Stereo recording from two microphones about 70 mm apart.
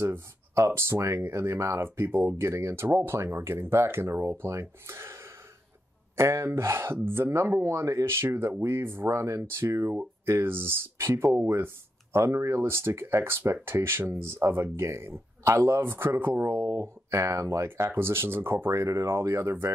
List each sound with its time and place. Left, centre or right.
0.0 s speech: right